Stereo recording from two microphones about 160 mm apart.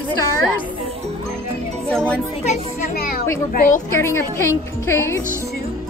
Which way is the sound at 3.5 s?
60° left (ahead or behind).